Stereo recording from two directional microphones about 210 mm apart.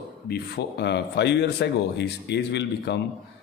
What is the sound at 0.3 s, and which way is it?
Speech, 55° left (ahead or behind).